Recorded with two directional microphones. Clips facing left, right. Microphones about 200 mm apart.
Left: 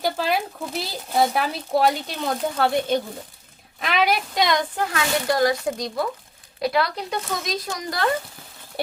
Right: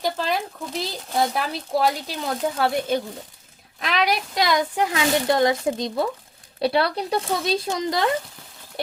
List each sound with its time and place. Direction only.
0.0 s speech: 5° left (ahead or behind)
4.8 s speech: 15° right (ahead or behind)